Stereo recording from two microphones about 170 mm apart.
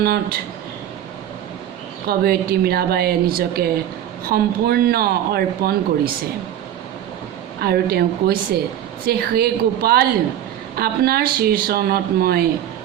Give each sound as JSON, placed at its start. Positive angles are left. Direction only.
{"t": 0.0, "sound": "speech", "side_deg": -65}
{"t": 2.0, "sound": "speech", "side_deg": -65}
{"t": 7.6, "sound": "speech", "side_deg": -65}